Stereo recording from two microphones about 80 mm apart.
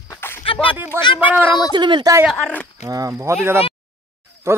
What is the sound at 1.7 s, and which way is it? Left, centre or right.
Speech, right.